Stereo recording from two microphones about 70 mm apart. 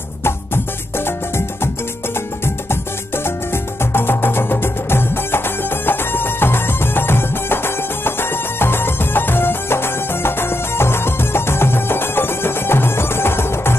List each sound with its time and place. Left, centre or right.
3.9 s music: left